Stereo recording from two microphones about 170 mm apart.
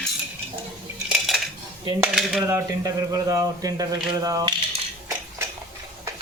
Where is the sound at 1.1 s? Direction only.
Centre (ahead or behind).